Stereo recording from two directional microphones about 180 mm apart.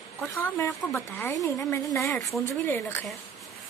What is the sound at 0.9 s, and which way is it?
Speech, centre (ahead or behind).